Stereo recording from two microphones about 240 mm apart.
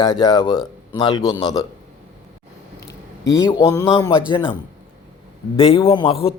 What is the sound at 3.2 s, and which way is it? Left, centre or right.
Music, centre.